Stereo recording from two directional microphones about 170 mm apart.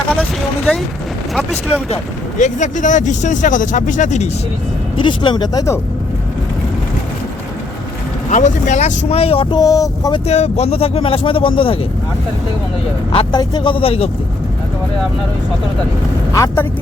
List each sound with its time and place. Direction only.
0.2 s a sound: 5° left (ahead or behind)
2.4 s speech: 45° left (ahead or behind)
4.9 s speech: 30° left (ahead or behind)
8.3 s speech: 45° left (ahead or behind); by 10.2 s 20° left (ahead or behind)
10.2 s speech: 40° left (ahead or behind)
13.1 s speech: 25° left (ahead or behind)
16.3 s speech: 20° left (ahead or behind)